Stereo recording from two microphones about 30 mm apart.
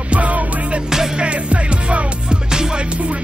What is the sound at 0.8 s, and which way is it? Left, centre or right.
Music, centre.